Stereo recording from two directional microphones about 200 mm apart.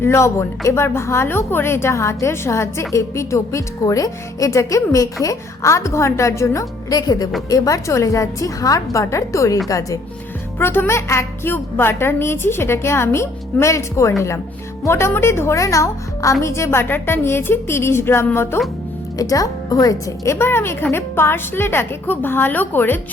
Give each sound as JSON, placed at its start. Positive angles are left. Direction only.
{"t": 0.0, "sound": "speech", "side_deg": 15}